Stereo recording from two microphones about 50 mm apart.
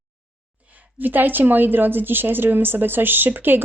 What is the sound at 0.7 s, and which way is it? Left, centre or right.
A woman's voice, right.